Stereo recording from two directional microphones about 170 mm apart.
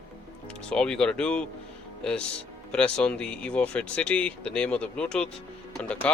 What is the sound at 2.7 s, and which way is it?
Speech, 5° left (ahead or behind).